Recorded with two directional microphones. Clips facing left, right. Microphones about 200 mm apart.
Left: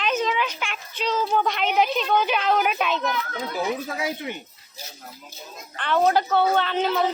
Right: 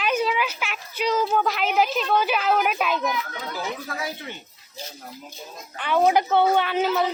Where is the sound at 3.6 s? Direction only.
20° left (ahead or behind).